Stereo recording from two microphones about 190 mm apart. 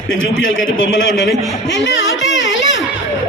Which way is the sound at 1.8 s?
70° left (ahead or behind).